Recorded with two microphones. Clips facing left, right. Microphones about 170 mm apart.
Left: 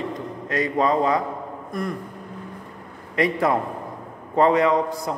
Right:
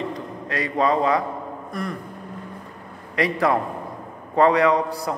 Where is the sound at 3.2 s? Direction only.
25° left (ahead or behind).